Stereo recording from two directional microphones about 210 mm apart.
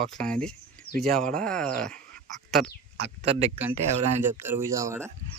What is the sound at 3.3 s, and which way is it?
Speech, 30° right (ahead or behind).